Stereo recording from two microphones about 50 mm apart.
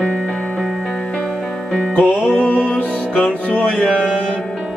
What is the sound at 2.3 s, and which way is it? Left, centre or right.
Music, left.